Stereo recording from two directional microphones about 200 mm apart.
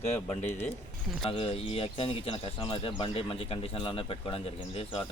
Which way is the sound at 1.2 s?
30° left (ahead or behind).